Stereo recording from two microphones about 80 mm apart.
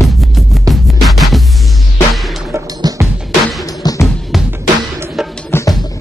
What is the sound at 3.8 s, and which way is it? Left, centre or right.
Music, left.